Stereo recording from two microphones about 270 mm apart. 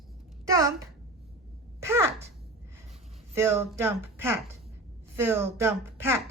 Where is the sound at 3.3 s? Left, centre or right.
Centre.